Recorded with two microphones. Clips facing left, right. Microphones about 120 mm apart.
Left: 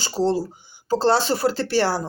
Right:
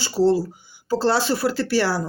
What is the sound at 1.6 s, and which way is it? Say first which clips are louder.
Speech: even; 25° left (ahead or behind).